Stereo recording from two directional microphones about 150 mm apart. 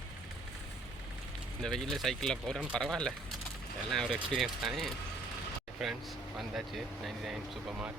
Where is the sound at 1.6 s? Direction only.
Centre (ahead or behind).